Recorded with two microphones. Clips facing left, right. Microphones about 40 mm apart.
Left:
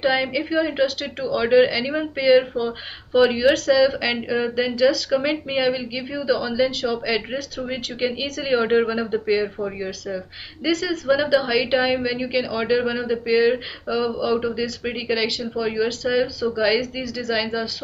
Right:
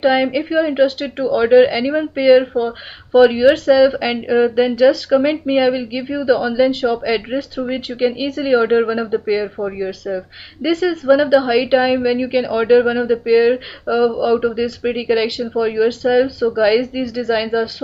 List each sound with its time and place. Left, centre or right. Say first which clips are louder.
0.0 s a woman's voice: right 6 dB; centre
7.1 s a woman's voice: right 5 dB; centre; by 11.0 s right
11.1 s a woman's voice: right 6 dB; centre